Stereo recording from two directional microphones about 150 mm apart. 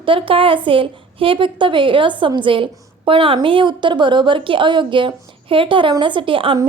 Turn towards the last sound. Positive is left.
turn(degrees=-35)  # may be behind; listen again after turning